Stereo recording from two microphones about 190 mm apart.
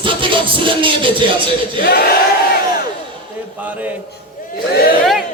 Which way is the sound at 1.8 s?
50° left (ahead or behind).